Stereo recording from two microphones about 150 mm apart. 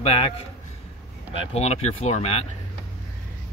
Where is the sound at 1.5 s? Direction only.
45° left (ahead or behind).